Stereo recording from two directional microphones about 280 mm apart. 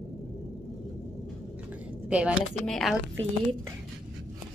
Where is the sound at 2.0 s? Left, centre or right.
Centre.